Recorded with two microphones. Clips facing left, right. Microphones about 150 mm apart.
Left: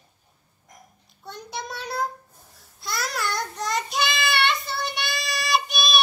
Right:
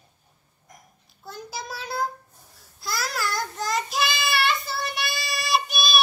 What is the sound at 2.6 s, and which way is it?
Child singing, centre (ahead or behind).